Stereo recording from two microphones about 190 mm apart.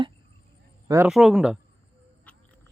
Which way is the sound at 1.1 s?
Centre (ahead or behind).